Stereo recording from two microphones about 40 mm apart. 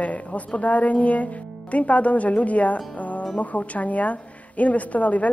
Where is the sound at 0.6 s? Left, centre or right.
Left.